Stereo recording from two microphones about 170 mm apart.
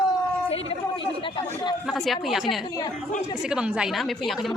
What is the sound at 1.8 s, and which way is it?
Speech, centre (ahead or behind).